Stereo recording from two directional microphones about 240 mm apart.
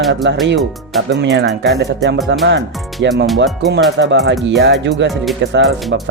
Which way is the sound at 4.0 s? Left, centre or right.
Right.